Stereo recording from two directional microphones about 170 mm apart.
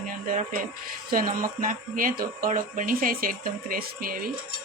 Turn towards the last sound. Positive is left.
turn(degrees=-60)  # may be behind; listen again after turning